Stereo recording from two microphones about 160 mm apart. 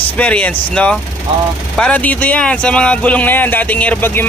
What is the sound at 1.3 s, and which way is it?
Speech, 35° right (ahead or behind).